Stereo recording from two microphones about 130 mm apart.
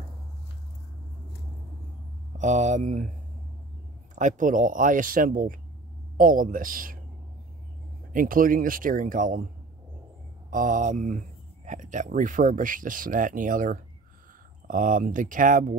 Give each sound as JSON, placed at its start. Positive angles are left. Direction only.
{"t": 2.3, "sound": "speech", "side_deg": -65}
{"t": 4.1, "sound": "speech", "side_deg": -80}
{"t": 8.1, "sound": "speech", "side_deg": -90}
{"t": 10.5, "sound": "speech", "side_deg": -90}